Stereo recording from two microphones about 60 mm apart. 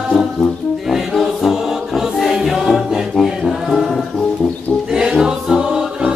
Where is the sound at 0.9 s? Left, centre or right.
Centre.